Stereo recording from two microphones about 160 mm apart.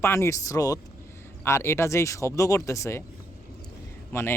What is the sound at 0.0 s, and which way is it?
Speech, 15° left (ahead or behind).